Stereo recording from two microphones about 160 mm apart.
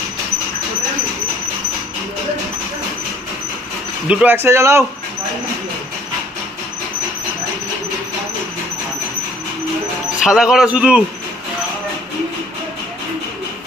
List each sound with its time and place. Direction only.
4.1 s a man's voice: 10° right (ahead or behind)
10.2 s a man's voice: 5° right (ahead or behind)